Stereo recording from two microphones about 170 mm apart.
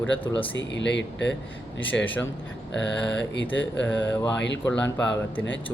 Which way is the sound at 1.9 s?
5° left (ahead or behind).